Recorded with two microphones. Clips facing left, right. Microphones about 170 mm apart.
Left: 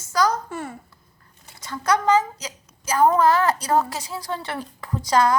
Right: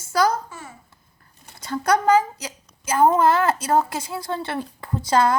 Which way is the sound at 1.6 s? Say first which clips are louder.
Right 6 dB; 30° right (ahead or behind).